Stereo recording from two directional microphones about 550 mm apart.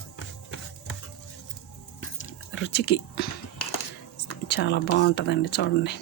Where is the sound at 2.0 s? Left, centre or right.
Left.